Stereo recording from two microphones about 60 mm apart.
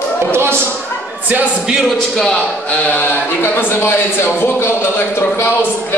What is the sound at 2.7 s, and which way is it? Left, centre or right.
Speech, left.